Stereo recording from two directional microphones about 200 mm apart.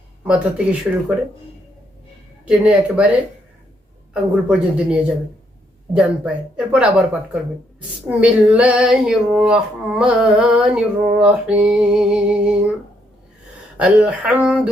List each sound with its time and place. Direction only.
0.3 s female singing: 5° right (ahead or behind)
2.5 s female singing: 5° right (ahead or behind)
4.1 s female singing: 5° right (ahead or behind)
13.7 s female singing: 5° right (ahead or behind)